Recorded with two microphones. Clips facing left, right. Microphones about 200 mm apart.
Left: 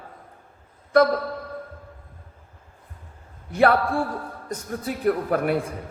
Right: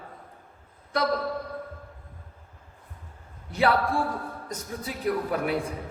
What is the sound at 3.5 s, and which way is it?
A man's voice, 50° left (ahead or behind).